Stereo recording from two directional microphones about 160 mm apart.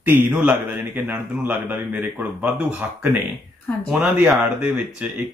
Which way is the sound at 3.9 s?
5° right (ahead or behind).